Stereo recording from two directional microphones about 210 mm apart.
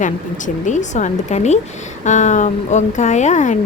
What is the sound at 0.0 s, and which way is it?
Speech, 35° left (ahead or behind).